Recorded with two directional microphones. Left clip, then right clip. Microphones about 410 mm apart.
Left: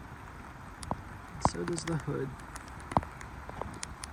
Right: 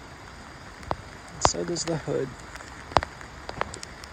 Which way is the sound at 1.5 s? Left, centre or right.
Centre.